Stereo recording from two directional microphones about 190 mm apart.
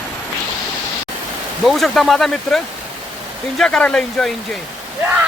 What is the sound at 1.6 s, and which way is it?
Speech, centre (ahead or behind).